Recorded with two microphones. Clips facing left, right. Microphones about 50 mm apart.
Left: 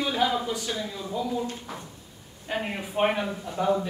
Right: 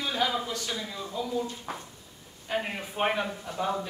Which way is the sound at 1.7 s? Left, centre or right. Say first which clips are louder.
Right 1 dB; right.